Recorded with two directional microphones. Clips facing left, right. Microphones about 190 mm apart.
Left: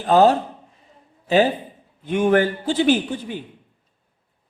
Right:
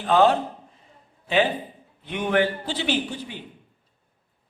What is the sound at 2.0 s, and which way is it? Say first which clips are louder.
A man's voice: left 5 dB; 45° left (ahead or behind).